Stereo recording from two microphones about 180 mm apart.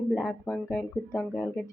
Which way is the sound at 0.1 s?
5° left (ahead or behind).